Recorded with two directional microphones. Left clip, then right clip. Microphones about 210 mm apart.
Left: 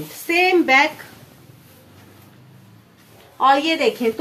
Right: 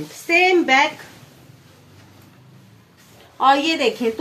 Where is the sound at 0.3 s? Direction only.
5° left (ahead or behind).